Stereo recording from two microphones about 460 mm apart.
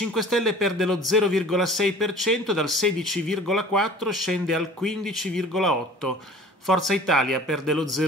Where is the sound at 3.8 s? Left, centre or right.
Right.